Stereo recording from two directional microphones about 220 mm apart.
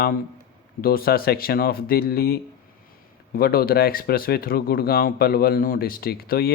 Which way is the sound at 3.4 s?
45° left (ahead or behind).